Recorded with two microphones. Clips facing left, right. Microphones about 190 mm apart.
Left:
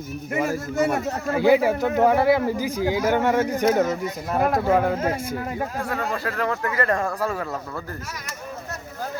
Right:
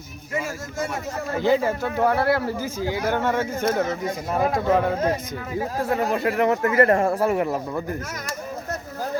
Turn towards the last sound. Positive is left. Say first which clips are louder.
# right 6 dB
turn(degrees=-20)  # may be behind; listen again after turning